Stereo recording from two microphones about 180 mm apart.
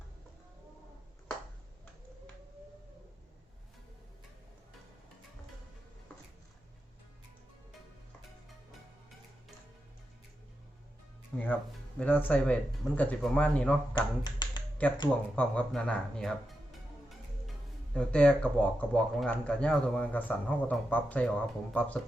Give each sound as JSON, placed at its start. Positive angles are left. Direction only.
{"t": 11.3, "sound": "music", "side_deg": 5}
{"t": 11.9, "sound": "speech", "side_deg": 10}
{"t": 13.9, "sound": "speech", "side_deg": 25}
{"t": 14.8, "sound": "speech", "side_deg": 10}
{"t": 17.9, "sound": "speech", "side_deg": 5}